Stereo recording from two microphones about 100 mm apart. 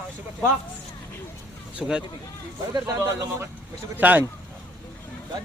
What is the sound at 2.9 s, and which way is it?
A man's voice, 25° right (ahead or behind).